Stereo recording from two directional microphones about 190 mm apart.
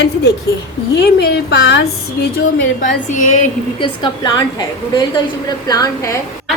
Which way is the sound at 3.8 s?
25° left (ahead or behind).